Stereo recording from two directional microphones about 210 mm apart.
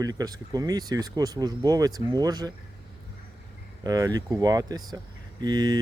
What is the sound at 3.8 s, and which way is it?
Speech, 15° right (ahead or behind).